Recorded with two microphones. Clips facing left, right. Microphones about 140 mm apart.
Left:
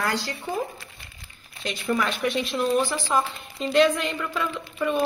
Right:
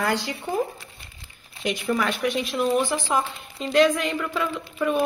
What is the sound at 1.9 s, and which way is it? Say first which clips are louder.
Speech: even; 5° right (ahead or behind).